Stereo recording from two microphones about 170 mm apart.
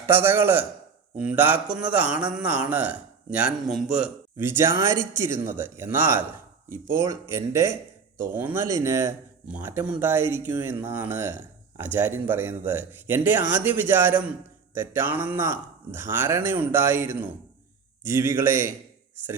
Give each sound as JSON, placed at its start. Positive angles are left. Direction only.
{"t": 0.1, "sound": "speech", "side_deg": -15}